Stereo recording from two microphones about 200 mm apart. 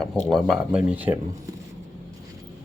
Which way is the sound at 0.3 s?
Centre (ahead or behind).